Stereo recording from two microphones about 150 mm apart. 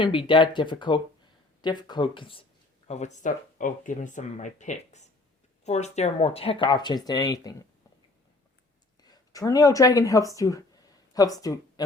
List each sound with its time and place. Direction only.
0.0 s speech: 35° left (ahead or behind)
2.8 s speech: 50° left (ahead or behind); by 7.5 s 25° left (ahead or behind)
9.0 s speech: 25° left (ahead or behind)